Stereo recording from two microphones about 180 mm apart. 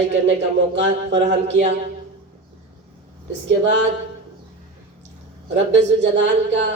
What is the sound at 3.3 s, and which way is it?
Speech, 75° right (ahead or behind).